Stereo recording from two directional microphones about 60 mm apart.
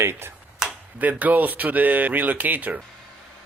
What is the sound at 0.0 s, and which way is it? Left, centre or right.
Speech, right.